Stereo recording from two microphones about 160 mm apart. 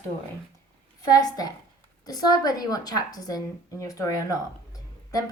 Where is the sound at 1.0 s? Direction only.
25° left (ahead or behind).